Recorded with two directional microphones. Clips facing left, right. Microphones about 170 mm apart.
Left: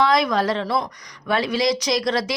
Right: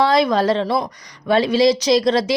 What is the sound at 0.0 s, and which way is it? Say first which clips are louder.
Speech: right 3 dB; 30° right (ahead or behind).